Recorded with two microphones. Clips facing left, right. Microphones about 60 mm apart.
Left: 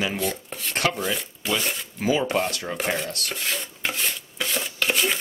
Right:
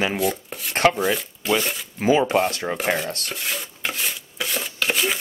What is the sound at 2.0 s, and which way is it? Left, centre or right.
Speech, right.